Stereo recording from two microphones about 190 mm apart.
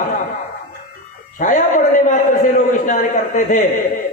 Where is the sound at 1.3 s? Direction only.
45° left (ahead or behind).